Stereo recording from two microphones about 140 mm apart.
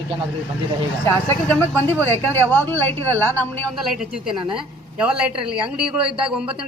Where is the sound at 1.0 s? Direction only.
15° left (ahead or behind).